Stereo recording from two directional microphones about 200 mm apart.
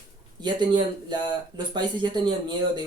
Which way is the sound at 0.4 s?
20° right (ahead or behind).